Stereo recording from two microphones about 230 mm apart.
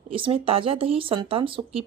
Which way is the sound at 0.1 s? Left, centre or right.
Right.